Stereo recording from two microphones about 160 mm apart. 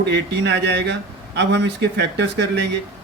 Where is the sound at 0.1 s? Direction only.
90° right.